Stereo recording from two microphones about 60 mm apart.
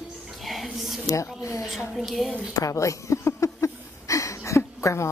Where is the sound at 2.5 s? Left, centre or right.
Left.